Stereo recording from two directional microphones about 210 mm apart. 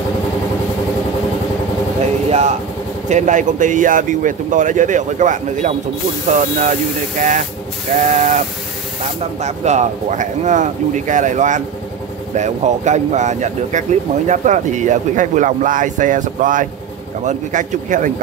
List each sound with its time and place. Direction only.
2.2 s a sound: 30° right (ahead or behind)
3.1 s speech: 35° right (ahead or behind)
9.4 s speech: 35° right (ahead or behind)